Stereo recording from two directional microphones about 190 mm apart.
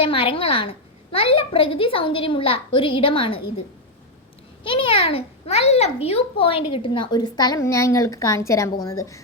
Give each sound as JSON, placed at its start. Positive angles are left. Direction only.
{"t": 0.0, "sound": "a child's voice", "side_deg": 30}
{"t": 4.6, "sound": "a child's voice", "side_deg": 25}